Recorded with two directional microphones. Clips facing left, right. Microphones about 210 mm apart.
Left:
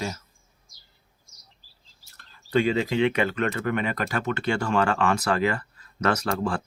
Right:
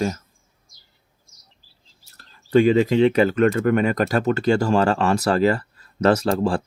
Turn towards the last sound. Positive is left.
turn(degrees=-35)  # may be behind; listen again after turning